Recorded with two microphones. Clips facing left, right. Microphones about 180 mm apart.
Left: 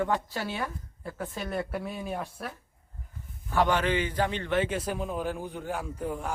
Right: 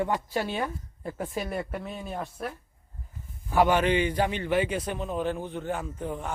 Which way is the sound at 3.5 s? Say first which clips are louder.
Right 3 dB; 10° right (ahead or behind).